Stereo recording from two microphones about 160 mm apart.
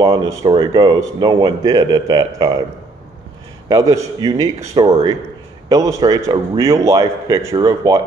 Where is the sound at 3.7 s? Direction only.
20° right (ahead or behind).